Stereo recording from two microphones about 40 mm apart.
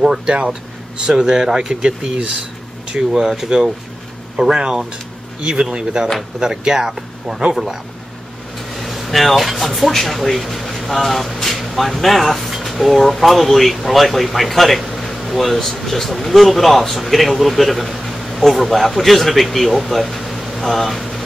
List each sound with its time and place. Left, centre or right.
0.3 s speech: right; by 14.8 s centre
14.8 s air conditioning: centre
15.8 s speech: centre
20.2 s a sound: centre